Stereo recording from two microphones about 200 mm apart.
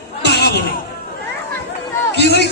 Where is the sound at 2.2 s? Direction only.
55° left (ahead or behind).